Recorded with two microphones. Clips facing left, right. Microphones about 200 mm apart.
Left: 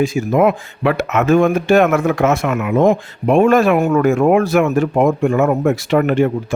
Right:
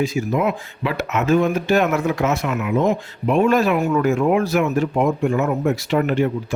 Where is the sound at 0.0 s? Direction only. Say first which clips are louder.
Left 6 dB; 50° left (ahead or behind).